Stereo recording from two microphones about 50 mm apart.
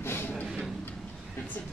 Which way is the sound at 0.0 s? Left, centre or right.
Left.